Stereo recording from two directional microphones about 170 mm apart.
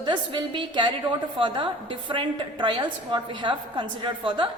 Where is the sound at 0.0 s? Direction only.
25° right (ahead or behind).